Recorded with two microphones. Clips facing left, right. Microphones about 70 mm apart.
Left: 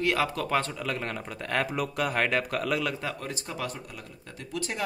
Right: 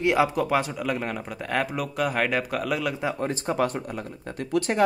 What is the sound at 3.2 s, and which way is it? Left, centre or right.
Speech, right.